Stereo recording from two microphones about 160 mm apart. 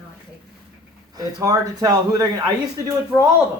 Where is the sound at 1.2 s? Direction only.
20° right (ahead or behind).